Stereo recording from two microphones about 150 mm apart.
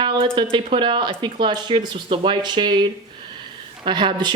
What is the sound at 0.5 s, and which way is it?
Speech, 35° right (ahead or behind).